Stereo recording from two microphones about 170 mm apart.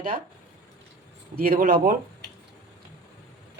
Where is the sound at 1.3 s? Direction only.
60° right (ahead or behind).